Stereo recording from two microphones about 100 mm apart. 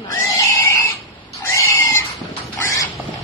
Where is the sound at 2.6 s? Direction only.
30° left (ahead or behind).